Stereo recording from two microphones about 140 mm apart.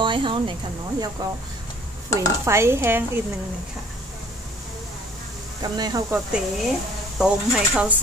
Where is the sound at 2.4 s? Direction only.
20° right (ahead or behind).